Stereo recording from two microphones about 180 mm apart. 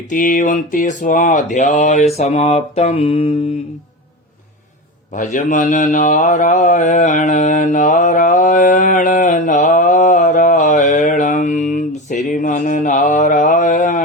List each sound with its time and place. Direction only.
0.1 s a sound: 45° left (ahead or behind)
2.1 s mantra: 35° left (ahead or behind)
5.1 s speech: 45° left (ahead or behind)